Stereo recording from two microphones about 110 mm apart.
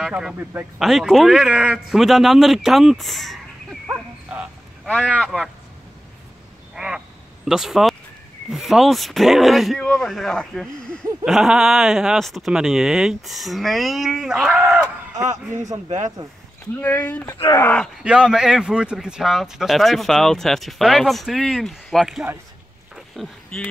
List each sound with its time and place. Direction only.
0.1 s a man's voice: 5° right (ahead or behind)
0.4 s speech: 20° right (ahead or behind)
0.7 s speech: centre (ahead or behind)
3.8 s dog: 10° right (ahead or behind)
5.2 s speech: centre (ahead or behind)
6.7 s quack: 5° right (ahead or behind)
7.4 s speech: 5° right (ahead or behind)
15.2 s speech: 90° right
16.8 s speech: 15° left (ahead or behind)
17.5 s speech: 25° left (ahead or behind)
18.0 s speech: 10° right (ahead or behind)
22.9 s a sound: centre (ahead or behind)